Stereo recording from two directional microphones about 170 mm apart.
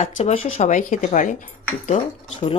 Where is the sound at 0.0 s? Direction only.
35° left (ahead or behind).